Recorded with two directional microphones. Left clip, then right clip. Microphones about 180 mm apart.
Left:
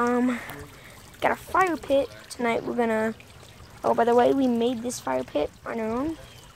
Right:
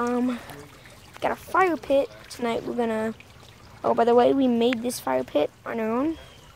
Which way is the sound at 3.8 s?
15° right (ahead or behind).